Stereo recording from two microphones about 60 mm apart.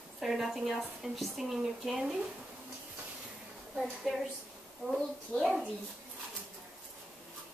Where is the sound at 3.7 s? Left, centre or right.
Centre.